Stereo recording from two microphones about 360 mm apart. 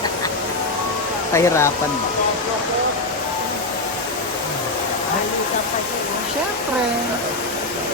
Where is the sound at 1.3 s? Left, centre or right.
Centre.